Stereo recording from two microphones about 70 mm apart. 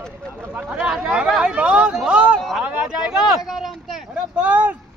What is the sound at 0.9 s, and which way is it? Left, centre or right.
Chatter, centre.